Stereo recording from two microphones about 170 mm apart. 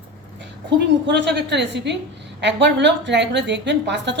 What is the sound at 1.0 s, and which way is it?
A woman's voice, 85° right.